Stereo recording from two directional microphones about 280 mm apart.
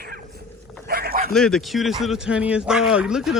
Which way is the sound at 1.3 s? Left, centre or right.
Centre.